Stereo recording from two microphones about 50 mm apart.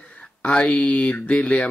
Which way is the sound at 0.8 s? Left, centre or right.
Left.